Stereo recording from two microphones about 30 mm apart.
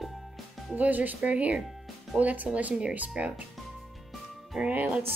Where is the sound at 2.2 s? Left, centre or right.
Right.